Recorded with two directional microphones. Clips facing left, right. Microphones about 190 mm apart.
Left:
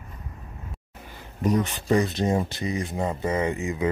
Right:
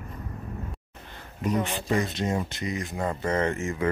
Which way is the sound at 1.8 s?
35° left (ahead or behind).